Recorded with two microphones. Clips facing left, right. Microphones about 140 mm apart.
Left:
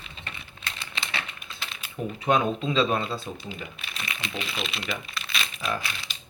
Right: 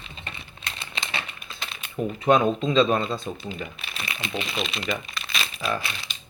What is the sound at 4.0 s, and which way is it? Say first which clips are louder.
Speech: right 3 dB; 35° right (ahead or behind).